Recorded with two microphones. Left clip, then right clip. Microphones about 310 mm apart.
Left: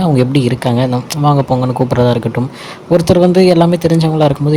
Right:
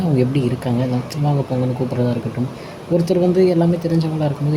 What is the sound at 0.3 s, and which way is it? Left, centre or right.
Speech, left.